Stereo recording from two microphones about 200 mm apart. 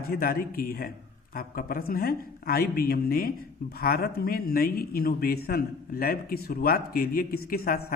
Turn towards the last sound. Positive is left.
turn(degrees=50)  # may be behind; listen again after turning